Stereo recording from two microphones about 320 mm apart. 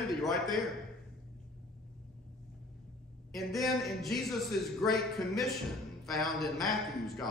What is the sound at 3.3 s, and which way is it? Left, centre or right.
A man's voice, centre.